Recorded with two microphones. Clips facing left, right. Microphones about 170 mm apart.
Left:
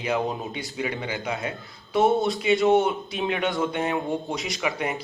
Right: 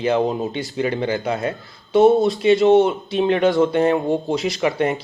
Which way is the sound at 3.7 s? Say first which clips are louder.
Right 9 dB; 35° right (ahead or behind).